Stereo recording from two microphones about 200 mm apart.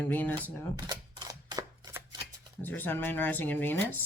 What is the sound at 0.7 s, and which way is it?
Camera, 20° right (ahead or behind).